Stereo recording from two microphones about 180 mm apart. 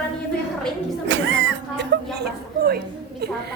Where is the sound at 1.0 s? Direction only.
90° right.